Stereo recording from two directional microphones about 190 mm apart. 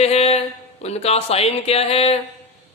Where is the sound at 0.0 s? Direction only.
35° left (ahead or behind).